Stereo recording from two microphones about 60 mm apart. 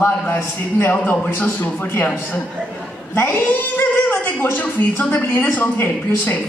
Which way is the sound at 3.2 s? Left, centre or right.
Left.